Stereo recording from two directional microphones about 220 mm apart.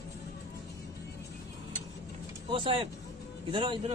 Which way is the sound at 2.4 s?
25° right (ahead or behind).